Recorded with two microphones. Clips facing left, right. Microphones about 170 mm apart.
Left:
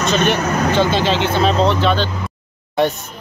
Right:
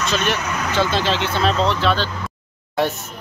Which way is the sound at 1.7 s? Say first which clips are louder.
Left 3 dB; centre (ahead or behind).